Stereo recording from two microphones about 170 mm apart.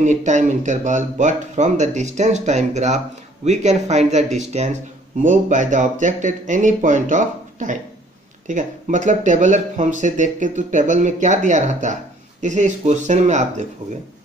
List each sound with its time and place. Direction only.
0.0 s speech: 45° right (ahead or behind)